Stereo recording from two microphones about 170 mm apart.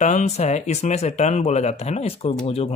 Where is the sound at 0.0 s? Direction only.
40° left (ahead or behind).